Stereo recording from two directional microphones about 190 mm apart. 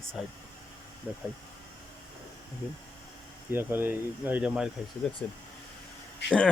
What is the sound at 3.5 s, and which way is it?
Speech, 10° right (ahead or behind).